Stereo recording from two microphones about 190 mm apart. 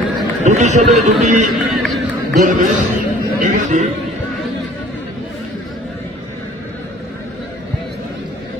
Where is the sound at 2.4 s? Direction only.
45° right (ahead or behind).